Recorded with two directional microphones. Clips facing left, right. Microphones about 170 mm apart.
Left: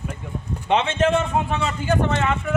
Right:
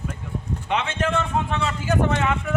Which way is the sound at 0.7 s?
25° left (ahead or behind).